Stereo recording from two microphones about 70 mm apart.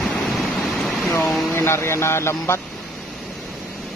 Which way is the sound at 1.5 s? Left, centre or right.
Left.